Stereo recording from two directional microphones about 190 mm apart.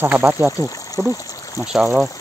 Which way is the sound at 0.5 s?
15° left (ahead or behind).